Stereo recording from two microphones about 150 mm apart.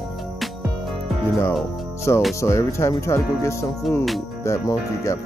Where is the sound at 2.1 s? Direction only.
20° left (ahead or behind).